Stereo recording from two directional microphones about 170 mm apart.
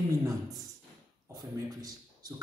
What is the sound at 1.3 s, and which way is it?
A man's voice, 25° right (ahead or behind).